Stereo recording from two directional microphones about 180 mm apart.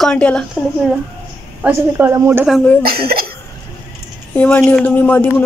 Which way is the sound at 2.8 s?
55° right (ahead or behind).